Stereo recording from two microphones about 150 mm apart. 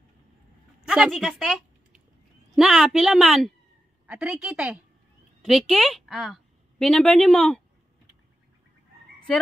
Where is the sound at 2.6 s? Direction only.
Centre (ahead or behind).